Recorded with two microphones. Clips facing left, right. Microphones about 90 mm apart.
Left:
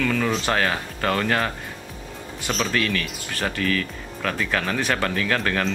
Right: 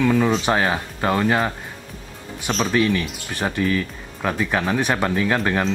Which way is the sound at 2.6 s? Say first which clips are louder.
Right 5 dB; 20° right (ahead or behind).